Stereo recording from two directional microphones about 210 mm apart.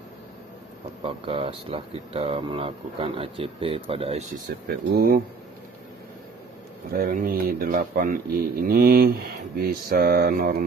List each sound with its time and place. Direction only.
1.0 s speech: 25° right (ahead or behind)
4.5 s speech: 45° right (ahead or behind)
6.9 s speech: 45° right (ahead or behind)